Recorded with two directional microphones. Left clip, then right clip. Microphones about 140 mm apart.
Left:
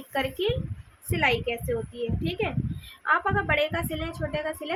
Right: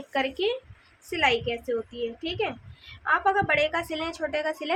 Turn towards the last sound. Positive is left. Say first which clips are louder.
# right 3 dB
turn(degrees=-25)  # may be behind; listen again after turning